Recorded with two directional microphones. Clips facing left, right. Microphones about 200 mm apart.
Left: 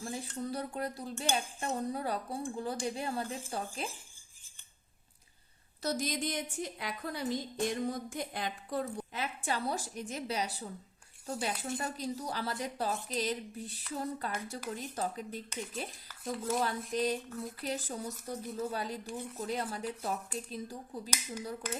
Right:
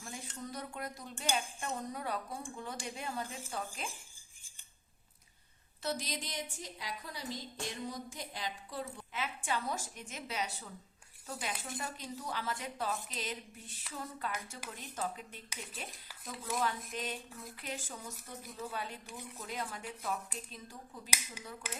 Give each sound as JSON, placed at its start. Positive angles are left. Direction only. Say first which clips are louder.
{"t": 0.0, "sound": "cutlery", "louder": "left 7 dB", "side_deg": 35}
{"t": 1.7, "sound": "a woman's voice", "louder": "left 5 dB", "side_deg": 35}
{"t": 5.8, "sound": "a woman's voice", "louder": "left 5 dB", "side_deg": 45}
{"t": 8.8, "sound": "a woman's voice", "louder": "left 1 dB", "side_deg": 40}